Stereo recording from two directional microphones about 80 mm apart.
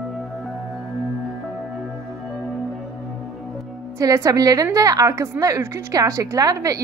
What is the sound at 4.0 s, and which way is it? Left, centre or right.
A woman's voice, right.